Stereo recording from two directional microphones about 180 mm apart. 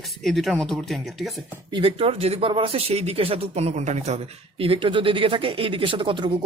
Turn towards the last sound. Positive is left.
turn(degrees=-25)  # may be behind; listen again after turning